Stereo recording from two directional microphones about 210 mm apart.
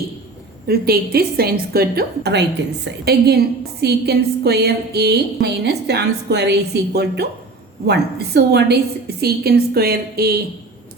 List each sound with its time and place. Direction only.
0.7 s a woman's voice: 50° right (ahead or behind)